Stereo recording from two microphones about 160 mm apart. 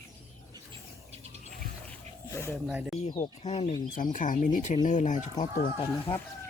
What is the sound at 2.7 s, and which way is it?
Speech, 5° right (ahead or behind).